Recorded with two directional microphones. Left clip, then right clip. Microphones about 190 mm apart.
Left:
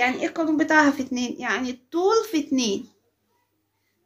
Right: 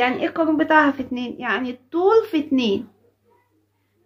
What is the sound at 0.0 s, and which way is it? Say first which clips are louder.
A woman's voice: right 3 dB; centre (ahead or behind).